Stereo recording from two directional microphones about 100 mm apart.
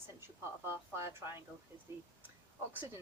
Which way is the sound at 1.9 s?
25° right (ahead or behind).